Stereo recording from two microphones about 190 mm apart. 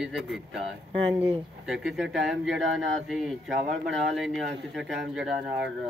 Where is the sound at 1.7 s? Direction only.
Centre (ahead or behind).